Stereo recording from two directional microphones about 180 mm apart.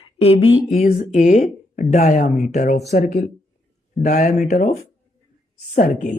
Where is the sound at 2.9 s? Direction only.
55° left (ahead or behind).